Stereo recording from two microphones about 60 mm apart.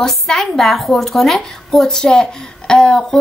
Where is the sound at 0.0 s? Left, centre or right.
Centre.